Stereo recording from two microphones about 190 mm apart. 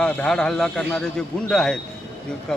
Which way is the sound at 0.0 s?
5° left (ahead or behind).